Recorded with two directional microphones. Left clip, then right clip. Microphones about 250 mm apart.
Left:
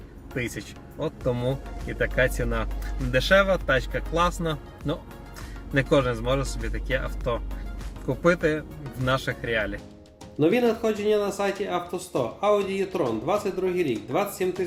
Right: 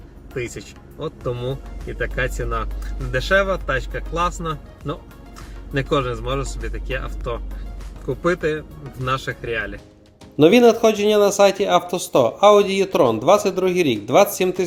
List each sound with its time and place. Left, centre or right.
0.3 s speech: centre
8.2 s speech: centre
10.3 s speech: right